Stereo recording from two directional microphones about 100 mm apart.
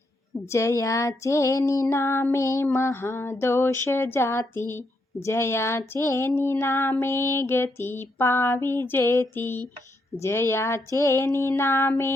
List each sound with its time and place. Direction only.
0.5 s female singing: 30° left (ahead or behind)